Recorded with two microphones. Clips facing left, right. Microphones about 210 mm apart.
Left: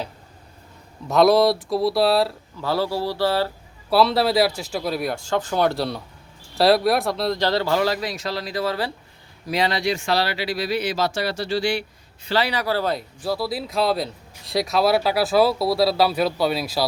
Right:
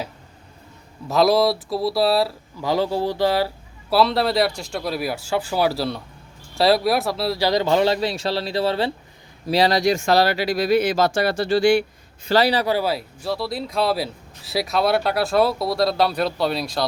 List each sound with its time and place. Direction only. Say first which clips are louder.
1.0 s speech: left 1 dB; centre (ahead or behind)
2.6 s speech: right 2 dB; 15° right (ahead or behind)
3.8 s speech: even; centre (ahead or behind); by 12.6 s 35° right (ahead or behind)
12.6 s speech: right 1 dB; 10° right (ahead or behind)